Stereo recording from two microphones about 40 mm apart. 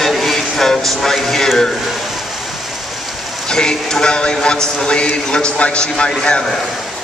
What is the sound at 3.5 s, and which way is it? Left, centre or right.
A man's voice, centre.